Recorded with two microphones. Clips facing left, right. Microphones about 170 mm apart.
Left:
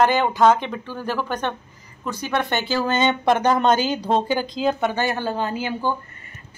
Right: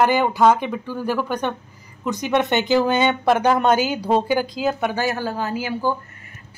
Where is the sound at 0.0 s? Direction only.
10° right (ahead or behind).